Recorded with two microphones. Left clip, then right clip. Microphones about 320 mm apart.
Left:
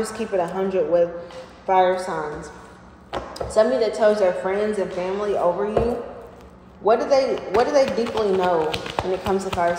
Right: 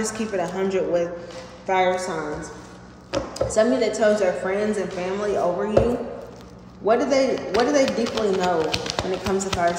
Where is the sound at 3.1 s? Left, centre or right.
Centre.